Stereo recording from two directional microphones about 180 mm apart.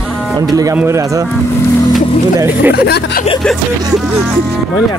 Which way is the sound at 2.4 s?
10° right (ahead or behind).